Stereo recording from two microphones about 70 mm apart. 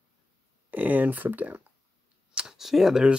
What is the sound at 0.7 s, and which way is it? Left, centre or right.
Speech, right.